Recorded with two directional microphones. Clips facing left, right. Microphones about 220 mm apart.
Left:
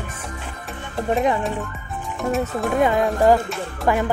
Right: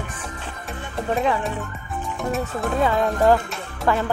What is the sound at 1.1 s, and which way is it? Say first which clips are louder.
Speech: left 2 dB; 20° left (ahead or behind).